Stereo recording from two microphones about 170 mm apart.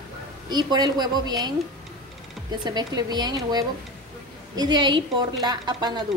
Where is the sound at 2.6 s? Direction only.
25° right (ahead or behind).